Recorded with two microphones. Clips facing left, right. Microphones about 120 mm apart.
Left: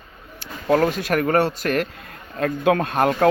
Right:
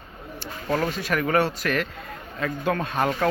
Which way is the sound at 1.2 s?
35° left (ahead or behind).